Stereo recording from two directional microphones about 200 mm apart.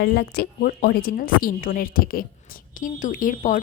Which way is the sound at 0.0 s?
55° left (ahead or behind).